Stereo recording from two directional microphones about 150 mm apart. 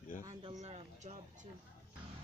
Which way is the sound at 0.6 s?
50° right (ahead or behind).